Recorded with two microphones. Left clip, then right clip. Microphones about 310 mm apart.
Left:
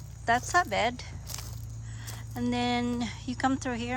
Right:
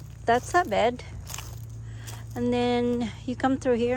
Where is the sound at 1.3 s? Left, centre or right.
Centre.